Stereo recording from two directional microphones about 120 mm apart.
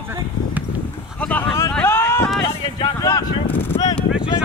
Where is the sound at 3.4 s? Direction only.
15° left (ahead or behind).